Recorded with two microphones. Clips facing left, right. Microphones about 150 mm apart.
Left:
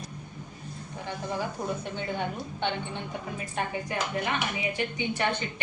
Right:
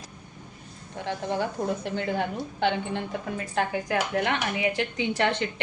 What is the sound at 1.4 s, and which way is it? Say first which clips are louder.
A woman's voice: right 4 dB; 90° right.